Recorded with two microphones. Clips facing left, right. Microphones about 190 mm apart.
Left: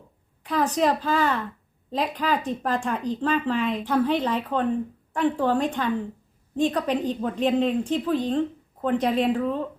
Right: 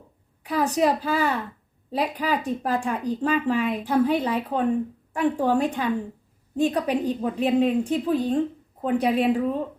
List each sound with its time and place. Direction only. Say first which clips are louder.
0.4 s speech: right 1 dB; 10° right (ahead or behind)